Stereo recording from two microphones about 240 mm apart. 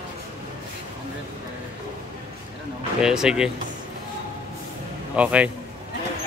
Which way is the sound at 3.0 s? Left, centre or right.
Centre.